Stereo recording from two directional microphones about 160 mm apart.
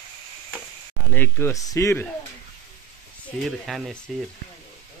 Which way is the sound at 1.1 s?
15° left (ahead or behind).